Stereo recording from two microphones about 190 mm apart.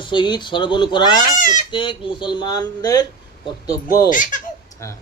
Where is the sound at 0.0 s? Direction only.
25° left (ahead or behind).